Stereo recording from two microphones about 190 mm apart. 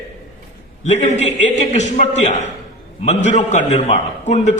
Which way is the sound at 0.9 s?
40° left (ahead or behind).